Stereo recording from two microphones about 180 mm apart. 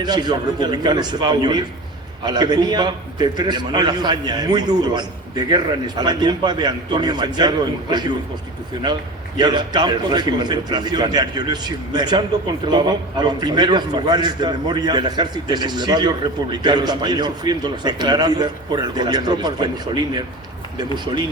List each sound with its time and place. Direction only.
0.0 s a man's voice: 25° right (ahead or behind)
9.4 s a man's voice: 25° right (ahead or behind)